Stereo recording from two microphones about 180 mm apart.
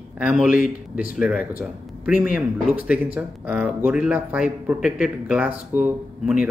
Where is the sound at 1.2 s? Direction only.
5° right (ahead or behind).